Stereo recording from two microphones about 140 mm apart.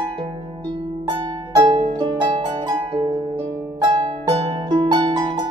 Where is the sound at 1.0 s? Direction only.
25° right (ahead or behind).